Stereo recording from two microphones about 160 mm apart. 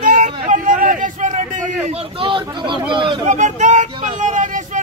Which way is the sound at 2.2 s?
30° right (ahead or behind).